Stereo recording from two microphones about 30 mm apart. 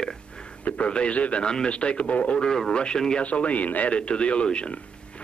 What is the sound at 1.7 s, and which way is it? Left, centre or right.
Speech, left.